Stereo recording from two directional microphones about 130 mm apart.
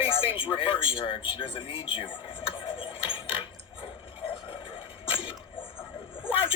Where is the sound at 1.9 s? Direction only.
40° left (ahead or behind).